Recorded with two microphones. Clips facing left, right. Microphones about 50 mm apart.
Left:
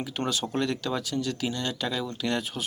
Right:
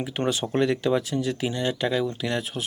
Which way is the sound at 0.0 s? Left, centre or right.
Right.